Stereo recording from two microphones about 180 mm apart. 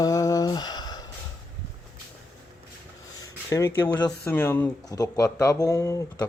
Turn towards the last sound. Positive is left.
turn(degrees=20)  # may be behind; listen again after turning